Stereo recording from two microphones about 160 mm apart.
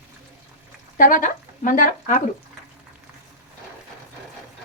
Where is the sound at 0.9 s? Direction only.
55° left (ahead or behind).